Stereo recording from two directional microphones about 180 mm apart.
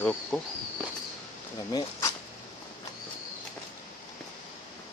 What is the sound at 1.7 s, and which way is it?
Speech, 25° left (ahead or behind).